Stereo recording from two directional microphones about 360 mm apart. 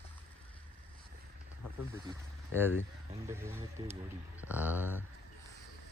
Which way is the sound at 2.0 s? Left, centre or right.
Centre.